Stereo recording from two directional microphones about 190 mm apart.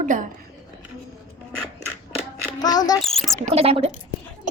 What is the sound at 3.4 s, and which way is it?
Speech, 30° right (ahead or behind).